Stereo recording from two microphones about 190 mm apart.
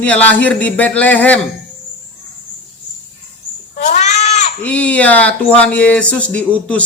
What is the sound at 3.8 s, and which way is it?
Cat, 40° left (ahead or behind).